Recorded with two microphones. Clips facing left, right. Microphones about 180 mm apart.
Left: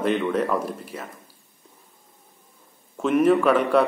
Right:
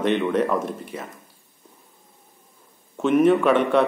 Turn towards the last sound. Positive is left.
turn(degrees=5)  # may be behind; listen again after turning